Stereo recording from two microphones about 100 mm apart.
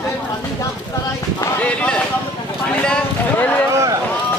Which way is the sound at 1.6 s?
10° left (ahead or behind).